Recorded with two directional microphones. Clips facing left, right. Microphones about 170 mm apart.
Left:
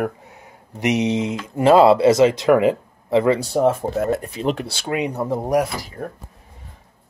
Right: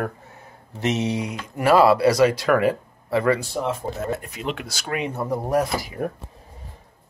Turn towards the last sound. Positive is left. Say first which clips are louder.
# right 3 dB
turn(degrees=-10)  # may be behind; listen again after turning